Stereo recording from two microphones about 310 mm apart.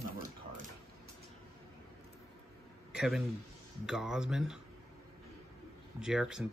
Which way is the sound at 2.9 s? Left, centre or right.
Centre.